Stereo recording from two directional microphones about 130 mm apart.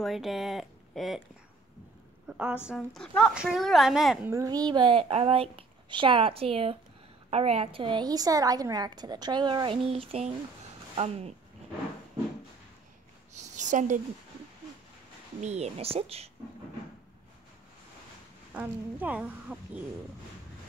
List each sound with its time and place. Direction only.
0.0 s a woman's voice: centre (ahead or behind)
2.2 s speech: 10° right (ahead or behind)
2.7 s a woman's voice: 5° left (ahead or behind)
4.3 s a woman's voice: 25° right (ahead or behind); by 11.3 s 55° right (ahead or behind)
13.3 s a sound: 70° right (ahead or behind)
15.4 s a woman's voice: 55° right (ahead or behind)
18.5 s speech: 10° right (ahead or behind)